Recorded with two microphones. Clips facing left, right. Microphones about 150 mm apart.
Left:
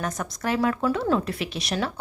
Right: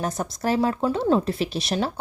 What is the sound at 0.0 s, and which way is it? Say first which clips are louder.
Speech: right 3 dB; 30° right (ahead or behind).